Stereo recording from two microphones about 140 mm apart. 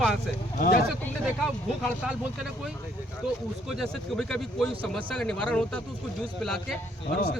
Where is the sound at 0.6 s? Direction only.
90° left.